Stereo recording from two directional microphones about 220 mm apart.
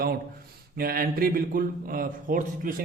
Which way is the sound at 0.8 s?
40° right (ahead or behind).